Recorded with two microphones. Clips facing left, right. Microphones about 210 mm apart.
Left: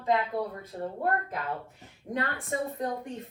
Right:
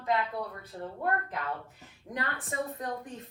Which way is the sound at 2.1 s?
30° left (ahead or behind).